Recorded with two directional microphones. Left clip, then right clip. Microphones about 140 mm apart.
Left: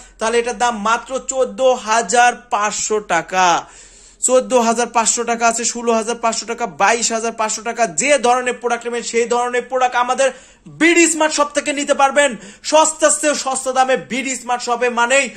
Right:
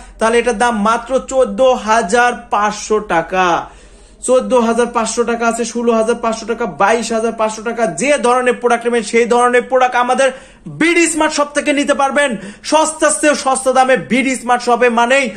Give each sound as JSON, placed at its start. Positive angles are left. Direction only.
{"t": 0.2, "sound": "a man's voice", "side_deg": 10}
{"t": 8.2, "sound": "a man's voice", "side_deg": 20}
{"t": 8.7, "sound": "a man's voice", "side_deg": 5}